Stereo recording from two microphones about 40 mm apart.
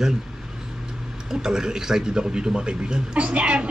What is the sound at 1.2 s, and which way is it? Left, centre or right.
A man's voice, centre.